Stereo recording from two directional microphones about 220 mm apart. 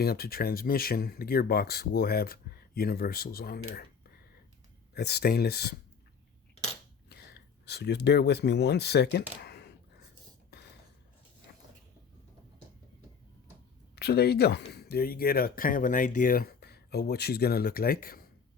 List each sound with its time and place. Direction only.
0.0 s speech: 45° left (ahead or behind)
4.9 s speech: 45° left (ahead or behind)
7.6 s speech: 50° left (ahead or behind)
9.4 s a sound: 50° left (ahead or behind)
13.9 s speech: 45° left (ahead or behind)